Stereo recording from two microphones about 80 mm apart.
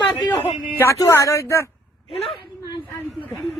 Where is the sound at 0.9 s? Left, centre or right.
Left.